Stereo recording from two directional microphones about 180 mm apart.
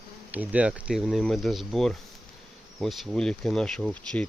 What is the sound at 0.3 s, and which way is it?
Speech, 10° right (ahead or behind).